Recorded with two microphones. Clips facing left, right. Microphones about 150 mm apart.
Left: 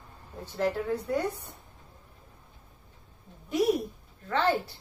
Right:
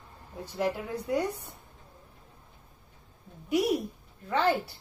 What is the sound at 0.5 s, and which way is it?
Speech, 10° right (ahead or behind).